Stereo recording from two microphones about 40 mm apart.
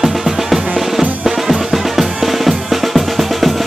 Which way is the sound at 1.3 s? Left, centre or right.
Centre.